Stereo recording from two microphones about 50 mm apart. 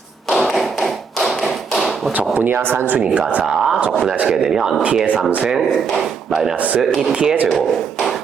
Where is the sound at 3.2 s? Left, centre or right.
Right.